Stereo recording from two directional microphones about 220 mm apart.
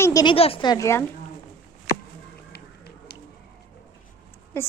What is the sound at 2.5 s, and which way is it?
Music, 45° left (ahead or behind).